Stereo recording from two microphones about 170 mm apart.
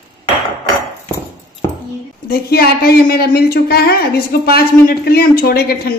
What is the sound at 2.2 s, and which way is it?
A woman's voice, 60° left (ahead or behind).